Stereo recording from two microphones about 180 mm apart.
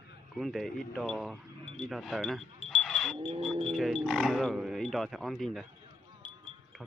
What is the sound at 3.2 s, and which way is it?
Livestock, 30° right (ahead or behind).